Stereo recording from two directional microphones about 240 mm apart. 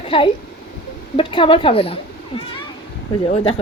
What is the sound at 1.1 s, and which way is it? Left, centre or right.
Speech, left.